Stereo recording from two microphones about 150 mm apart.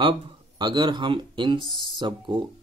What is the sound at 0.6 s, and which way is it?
Speech, 30° right (ahead or behind).